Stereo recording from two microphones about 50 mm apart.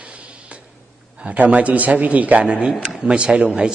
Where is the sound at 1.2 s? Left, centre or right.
Right.